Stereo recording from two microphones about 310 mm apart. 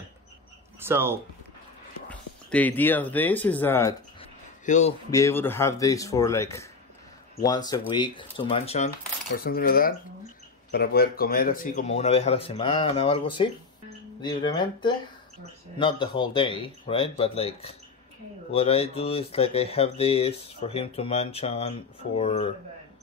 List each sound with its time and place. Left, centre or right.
0.7 s speech: centre
2.0 s speech: centre
4.6 s speech: left
5.1 s speech: centre